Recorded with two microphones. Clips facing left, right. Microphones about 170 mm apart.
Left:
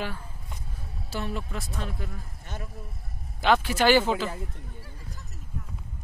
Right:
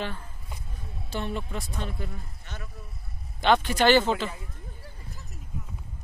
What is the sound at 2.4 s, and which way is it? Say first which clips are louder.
Speech: left 3 dB; 45° left (ahead or behind).